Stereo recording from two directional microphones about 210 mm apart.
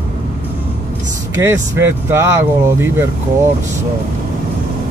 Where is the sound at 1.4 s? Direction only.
10° right (ahead or behind).